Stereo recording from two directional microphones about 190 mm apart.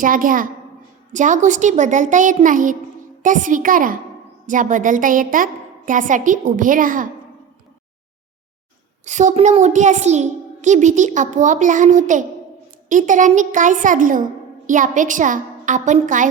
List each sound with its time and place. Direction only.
0.0 s a woman's voice: 45° right (ahead or behind)
9.0 s a child's voice: 40° right (ahead or behind)